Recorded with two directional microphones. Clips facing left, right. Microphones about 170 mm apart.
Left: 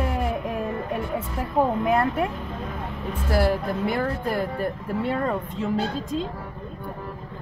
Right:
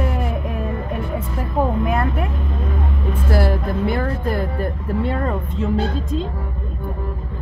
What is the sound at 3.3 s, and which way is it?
Speech, 10° left (ahead or behind).